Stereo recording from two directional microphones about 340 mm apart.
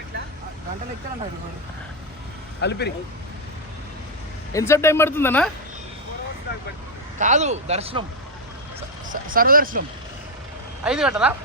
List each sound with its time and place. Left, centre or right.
2.6 s speech: left
4.5 s speech: centre
7.2 s speech: right
9.0 s speech: right
10.8 s speech: centre